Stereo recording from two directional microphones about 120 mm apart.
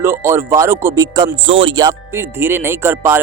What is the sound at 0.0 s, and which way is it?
Speech, 20° right (ahead or behind).